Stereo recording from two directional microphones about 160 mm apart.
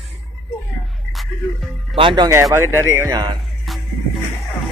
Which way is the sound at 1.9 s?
30° right (ahead or behind).